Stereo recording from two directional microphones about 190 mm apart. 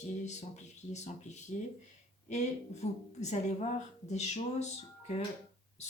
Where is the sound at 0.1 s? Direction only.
35° left (ahead or behind).